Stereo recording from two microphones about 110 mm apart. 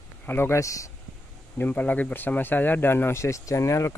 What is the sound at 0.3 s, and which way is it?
Speech, 20° left (ahead or behind).